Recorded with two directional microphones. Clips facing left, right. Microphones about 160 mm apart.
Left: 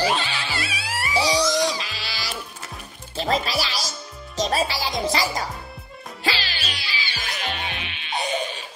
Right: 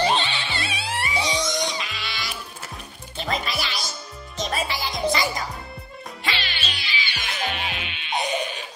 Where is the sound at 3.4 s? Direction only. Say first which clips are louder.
Left 3 dB; 35° left (ahead or behind).